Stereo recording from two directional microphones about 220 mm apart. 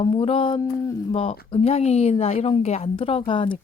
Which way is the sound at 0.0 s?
25° left (ahead or behind).